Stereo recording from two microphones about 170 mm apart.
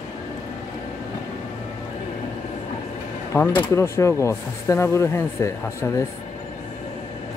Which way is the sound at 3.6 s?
15° left (ahead or behind).